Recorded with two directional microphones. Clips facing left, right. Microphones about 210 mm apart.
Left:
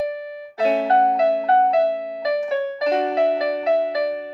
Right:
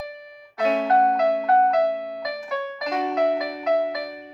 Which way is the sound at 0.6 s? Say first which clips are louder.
Left 2 dB; 30° left (ahead or behind).